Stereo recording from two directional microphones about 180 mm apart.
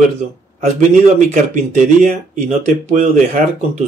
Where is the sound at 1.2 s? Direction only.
45° right (ahead or behind).